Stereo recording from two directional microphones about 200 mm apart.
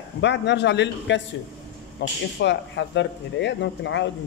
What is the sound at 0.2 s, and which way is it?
Speech, 60° left (ahead or behind).